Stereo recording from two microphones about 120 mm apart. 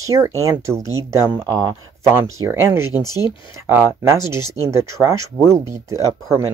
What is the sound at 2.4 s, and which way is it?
Speech, 20° right (ahead or behind).